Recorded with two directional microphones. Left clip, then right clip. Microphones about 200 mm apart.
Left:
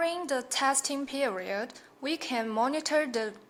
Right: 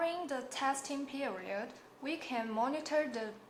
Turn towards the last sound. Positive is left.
turn(degrees=40)  # may be behind; listen again after turning